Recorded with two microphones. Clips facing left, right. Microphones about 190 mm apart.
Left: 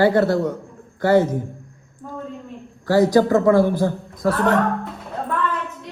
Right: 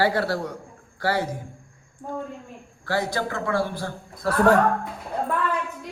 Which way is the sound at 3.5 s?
20° left (ahead or behind).